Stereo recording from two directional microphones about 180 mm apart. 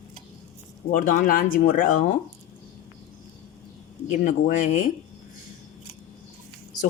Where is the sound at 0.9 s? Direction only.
50° left (ahead or behind).